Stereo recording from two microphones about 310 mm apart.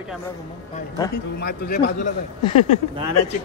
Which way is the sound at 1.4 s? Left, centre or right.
Left.